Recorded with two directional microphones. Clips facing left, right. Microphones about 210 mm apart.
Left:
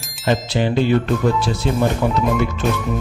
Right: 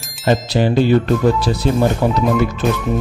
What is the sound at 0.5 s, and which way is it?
Speech, 40° right (ahead or behind).